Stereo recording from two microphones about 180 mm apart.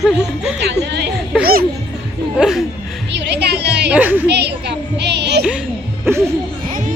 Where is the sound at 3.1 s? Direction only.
70° right (ahead or behind).